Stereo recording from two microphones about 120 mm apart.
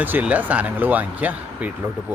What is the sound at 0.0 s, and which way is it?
Speech, 15° right (ahead or behind).